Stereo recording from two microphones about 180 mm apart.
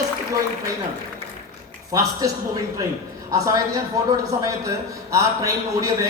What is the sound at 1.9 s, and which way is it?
Speech, 20° right (ahead or behind).